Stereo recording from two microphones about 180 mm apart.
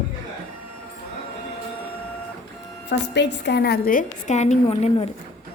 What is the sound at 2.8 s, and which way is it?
A woman's voice, 75° left (ahead or behind).